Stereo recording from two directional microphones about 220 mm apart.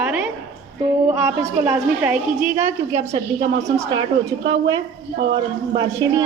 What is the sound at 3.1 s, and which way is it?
Speech, 30° right (ahead or behind).